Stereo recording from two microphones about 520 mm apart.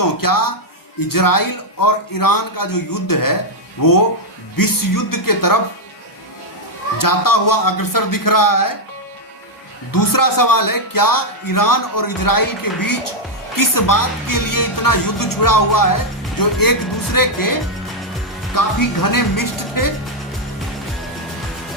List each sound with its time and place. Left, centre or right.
0.0 s speech: left
7.0 s speech: left
9.9 s speech: left